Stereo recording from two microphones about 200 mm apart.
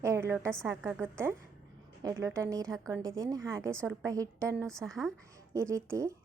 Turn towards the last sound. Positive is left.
turn(degrees=-15)  # may be behind; listen again after turning